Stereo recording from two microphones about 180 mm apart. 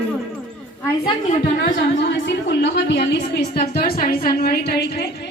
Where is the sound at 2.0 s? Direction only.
75° left (ahead or behind).